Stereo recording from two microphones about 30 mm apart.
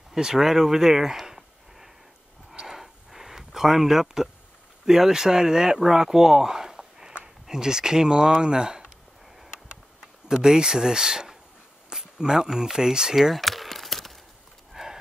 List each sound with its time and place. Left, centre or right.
0.1 s speech: centre
1.2 s a sound: centre
4.8 s speech: centre
10.2 s speech: right
11.9 s a sound: centre
12.4 s speech: centre
13.4 s crumpling: centre
14.7 s horse: centre